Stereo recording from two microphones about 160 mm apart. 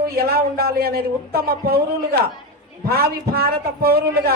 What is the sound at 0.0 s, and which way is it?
Speech, 70° right (ahead or behind).